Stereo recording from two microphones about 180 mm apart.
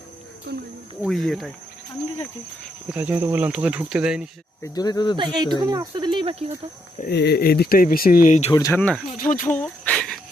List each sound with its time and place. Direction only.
1.0 s speech: centre (ahead or behind)
2.9 s speech: 10° right (ahead or behind)
4.6 s speech: 20° left (ahead or behind)
5.1 s speech: 25° right (ahead or behind)
7.0 s speech: 65° left (ahead or behind); by 8.5 s 40° left (ahead or behind)
8.5 s speech: 15° left (ahead or behind)
9.2 s speech: 45° left (ahead or behind)
9.5 s a sound: 5° left (ahead or behind)